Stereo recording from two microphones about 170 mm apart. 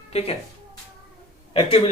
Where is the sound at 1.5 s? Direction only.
35° left (ahead or behind).